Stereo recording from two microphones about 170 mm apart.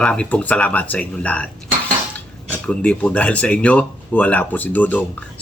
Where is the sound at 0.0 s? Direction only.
5° left (ahead or behind).